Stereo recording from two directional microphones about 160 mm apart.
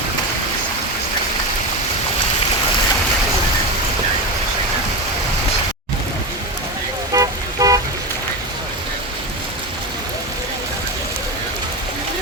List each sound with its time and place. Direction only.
7.1 s toot: 20° right (ahead or behind)